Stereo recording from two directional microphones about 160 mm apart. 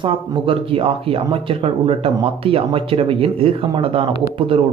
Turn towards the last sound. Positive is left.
turn(degrees=-35)  # may be behind; listen again after turning